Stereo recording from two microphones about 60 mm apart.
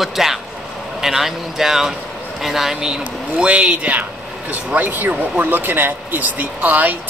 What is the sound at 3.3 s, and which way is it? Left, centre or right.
Speech, centre.